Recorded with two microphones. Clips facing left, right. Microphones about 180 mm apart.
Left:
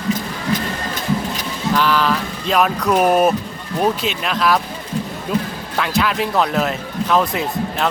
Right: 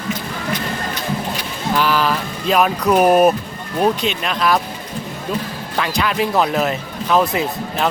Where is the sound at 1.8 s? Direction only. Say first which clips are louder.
Even; 10° right (ahead or behind).